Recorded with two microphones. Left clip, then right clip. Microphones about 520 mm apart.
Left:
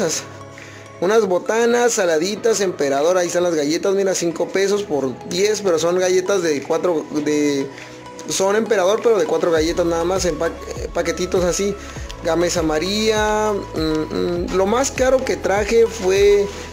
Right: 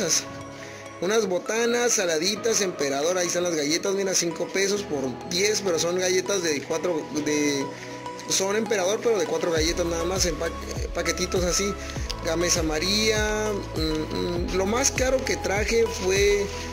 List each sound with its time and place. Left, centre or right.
1.0 s speech: left